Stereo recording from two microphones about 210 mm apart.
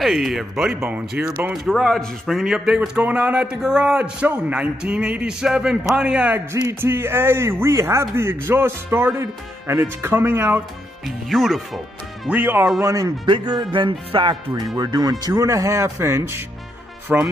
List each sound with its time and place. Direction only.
0.0 s speech: centre (ahead or behind)
12.8 s speech: 15° right (ahead or behind)